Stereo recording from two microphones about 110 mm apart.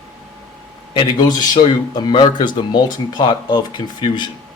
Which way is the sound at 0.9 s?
40° left (ahead or behind).